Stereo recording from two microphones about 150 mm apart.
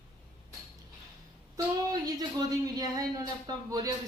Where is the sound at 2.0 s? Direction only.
25° right (ahead or behind).